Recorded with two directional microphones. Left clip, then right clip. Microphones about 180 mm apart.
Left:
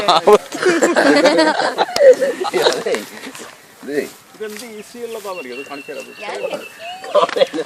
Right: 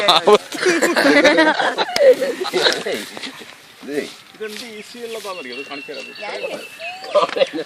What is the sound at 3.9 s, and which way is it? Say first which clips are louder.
Speech: left 3 dB; 5° left (ahead or behind).